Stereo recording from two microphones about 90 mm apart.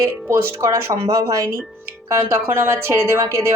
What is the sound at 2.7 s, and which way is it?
Speech, 30° right (ahead or behind).